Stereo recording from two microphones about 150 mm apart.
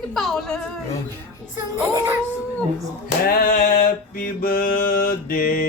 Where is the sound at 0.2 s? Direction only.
5° left (ahead or behind).